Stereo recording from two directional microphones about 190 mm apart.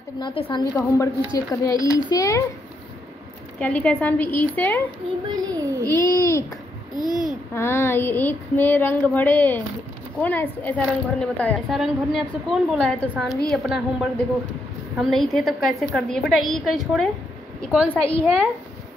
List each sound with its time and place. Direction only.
0.2 s a woman's voice: 25° left (ahead or behind)
1.2 s child singing: 15° left (ahead or behind)
3.5 s child singing: 5° left (ahead or behind)
5.3 s a child's voice: 20° right (ahead or behind)
5.9 s child singing: 15° left (ahead or behind)
7.1 s a woman's voice: centre (ahead or behind)
7.5 s child singing: 15° left (ahead or behind)
11.5 s a woman's voice: centre (ahead or behind)
17.8 s child singing: 5° left (ahead or behind)